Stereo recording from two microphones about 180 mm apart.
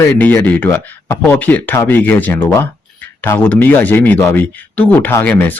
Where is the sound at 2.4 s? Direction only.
20° left (ahead or behind).